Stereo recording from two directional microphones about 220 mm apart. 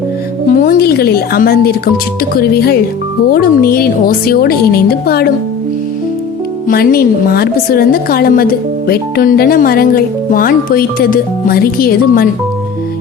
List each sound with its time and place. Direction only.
0.5 s a woman's voice: 40° left (ahead or behind)
6.7 s a woman's voice: 40° left (ahead or behind)